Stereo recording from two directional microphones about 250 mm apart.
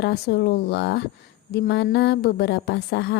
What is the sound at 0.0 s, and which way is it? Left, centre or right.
A woman's voice, left.